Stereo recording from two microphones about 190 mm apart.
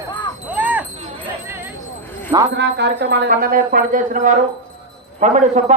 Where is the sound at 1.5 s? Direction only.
10° right (ahead or behind).